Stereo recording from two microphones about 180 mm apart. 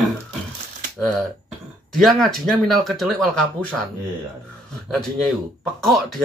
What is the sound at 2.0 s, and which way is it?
Speech, centre (ahead or behind).